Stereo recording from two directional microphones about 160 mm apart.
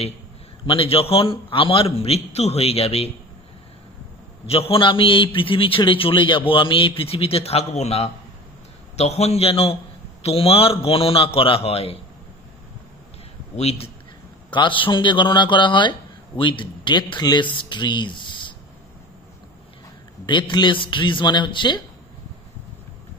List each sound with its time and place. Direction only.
0.7 s a man's voice: 35° left (ahead or behind)
4.5 s a man's voice: 35° left (ahead or behind)
13.6 s a man's voice: 40° left (ahead or behind)
20.2 s speech: 30° left (ahead or behind)